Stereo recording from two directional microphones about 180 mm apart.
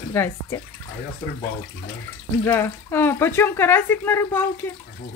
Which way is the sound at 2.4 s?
10° left (ahead or behind).